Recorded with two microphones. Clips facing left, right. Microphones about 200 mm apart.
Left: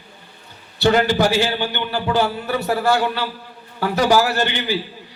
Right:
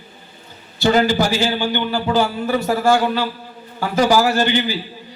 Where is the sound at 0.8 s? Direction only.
65° left (ahead or behind).